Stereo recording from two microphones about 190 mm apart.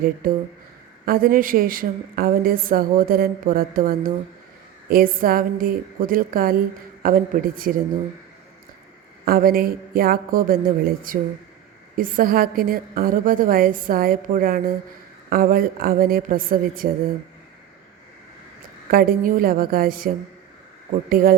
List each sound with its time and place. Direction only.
0.2 s a woman's voice: 50° right (ahead or behind)
9.2 s a woman's voice: 50° right (ahead or behind)
18.9 s a woman's voice: 50° right (ahead or behind)